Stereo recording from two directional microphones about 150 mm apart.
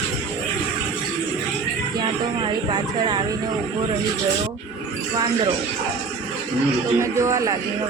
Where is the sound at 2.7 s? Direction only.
30° right (ahead or behind).